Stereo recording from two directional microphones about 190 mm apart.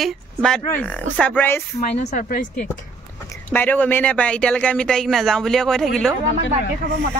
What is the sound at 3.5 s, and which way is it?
Speech, 10° left (ahead or behind).